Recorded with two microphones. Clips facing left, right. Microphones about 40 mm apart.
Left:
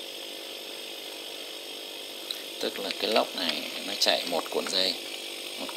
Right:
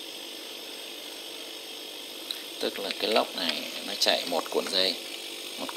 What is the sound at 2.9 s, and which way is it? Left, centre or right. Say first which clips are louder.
Speech: even; centre.